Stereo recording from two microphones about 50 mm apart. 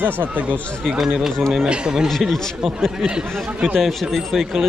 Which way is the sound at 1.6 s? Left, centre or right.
Centre.